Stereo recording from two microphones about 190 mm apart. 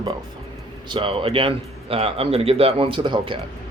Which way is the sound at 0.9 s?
25° right (ahead or behind).